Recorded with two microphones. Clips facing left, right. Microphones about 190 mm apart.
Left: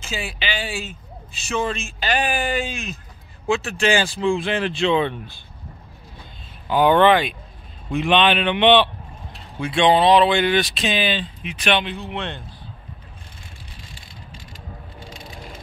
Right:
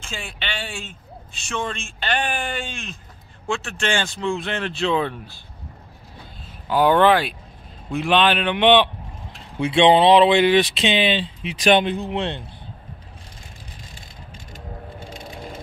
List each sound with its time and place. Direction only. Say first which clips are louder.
0.0 s a man's voice: left 4 dB; 5° left (ahead or behind)
6.7 s a man's voice: left 1 dB; 5° right (ahead or behind)
9.6 s speech: right 2 dB; 25° right (ahead or behind)
11.6 s speech: right 5 dB; 45° right (ahead or behind)